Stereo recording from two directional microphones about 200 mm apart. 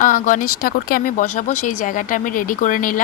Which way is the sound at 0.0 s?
40° left (ahead or behind).